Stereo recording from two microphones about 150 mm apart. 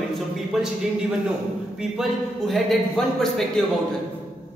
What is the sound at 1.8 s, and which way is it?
A man's voice, centre (ahead or behind).